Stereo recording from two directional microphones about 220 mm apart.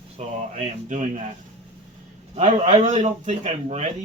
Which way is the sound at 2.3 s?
30° right (ahead or behind).